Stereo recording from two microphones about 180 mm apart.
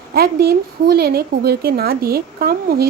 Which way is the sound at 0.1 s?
60° right (ahead or behind).